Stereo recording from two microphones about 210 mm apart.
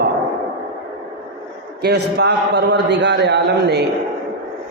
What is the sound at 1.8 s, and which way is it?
A man's voice, 50° right (ahead or behind).